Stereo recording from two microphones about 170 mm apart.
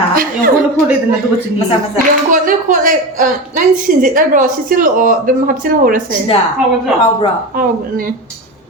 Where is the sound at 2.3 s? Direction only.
50° right (ahead or behind).